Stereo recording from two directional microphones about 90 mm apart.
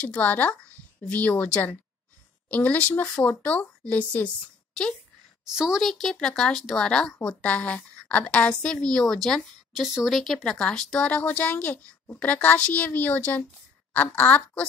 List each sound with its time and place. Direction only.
0.0 s a woman's voice: 15° left (ahead or behind)
5.4 s a woman's voice: 5° right (ahead or behind); by 14.6 s 15° left (ahead or behind)